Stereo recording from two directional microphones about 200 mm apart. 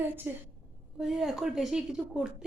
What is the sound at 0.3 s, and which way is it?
A woman's voice, 10° right (ahead or behind).